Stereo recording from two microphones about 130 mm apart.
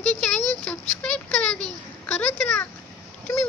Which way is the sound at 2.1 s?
10° left (ahead or behind).